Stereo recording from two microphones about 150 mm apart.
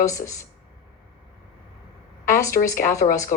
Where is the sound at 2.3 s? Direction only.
20° left (ahead or behind).